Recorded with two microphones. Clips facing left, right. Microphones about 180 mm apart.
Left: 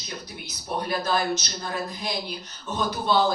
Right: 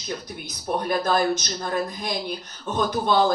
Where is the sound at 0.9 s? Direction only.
50° right (ahead or behind).